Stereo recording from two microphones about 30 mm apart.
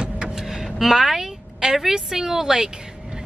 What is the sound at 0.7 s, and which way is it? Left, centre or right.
A woman's voice, centre.